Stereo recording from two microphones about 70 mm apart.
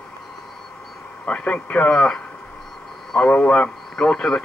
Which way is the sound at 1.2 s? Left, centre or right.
Centre.